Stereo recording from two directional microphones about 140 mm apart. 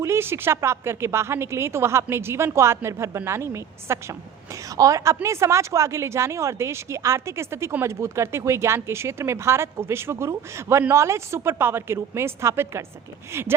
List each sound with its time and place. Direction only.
0.0 s a woman's voice: 20° right (ahead or behind)